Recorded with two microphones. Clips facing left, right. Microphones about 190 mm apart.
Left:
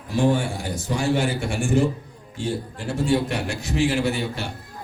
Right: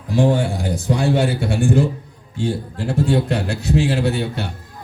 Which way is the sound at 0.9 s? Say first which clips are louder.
Right 4 dB; 60° right (ahead or behind).